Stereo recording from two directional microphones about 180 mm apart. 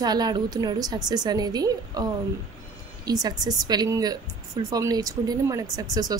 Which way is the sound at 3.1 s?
20° right (ahead or behind).